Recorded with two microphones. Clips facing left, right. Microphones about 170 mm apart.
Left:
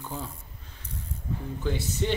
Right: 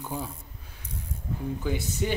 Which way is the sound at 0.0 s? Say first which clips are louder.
Right 2 dB; 10° right (ahead or behind).